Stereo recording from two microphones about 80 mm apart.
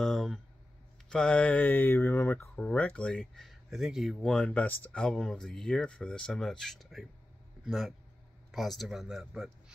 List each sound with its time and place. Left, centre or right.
0.0 s a sound: centre
1.0 s speech: centre; by 2.4 s left
2.5 s speech: centre
4.2 s speech: centre
5.0 s speech: centre